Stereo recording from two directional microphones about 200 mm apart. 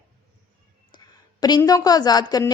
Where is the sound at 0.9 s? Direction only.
20° left (ahead or behind).